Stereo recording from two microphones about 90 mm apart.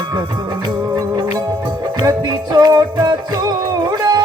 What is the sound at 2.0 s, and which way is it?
Music, 45° right (ahead or behind).